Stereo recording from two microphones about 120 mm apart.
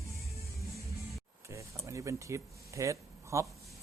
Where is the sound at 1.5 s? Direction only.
25° right (ahead or behind).